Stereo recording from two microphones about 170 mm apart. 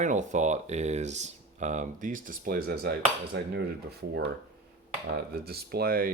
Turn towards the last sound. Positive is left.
turn(degrees=-60)  # may be behind; listen again after turning